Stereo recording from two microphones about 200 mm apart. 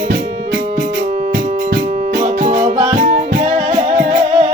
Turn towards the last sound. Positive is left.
turn(degrees=-35)  # may be behind; listen again after turning